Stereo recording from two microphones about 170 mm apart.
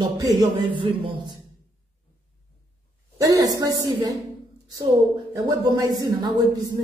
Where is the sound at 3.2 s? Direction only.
20° right (ahead or behind).